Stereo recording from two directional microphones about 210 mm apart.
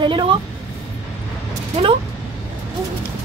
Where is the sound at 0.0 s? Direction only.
20° right (ahead or behind).